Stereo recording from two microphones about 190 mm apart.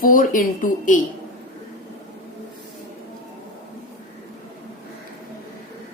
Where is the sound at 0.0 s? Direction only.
45° left (ahead or behind).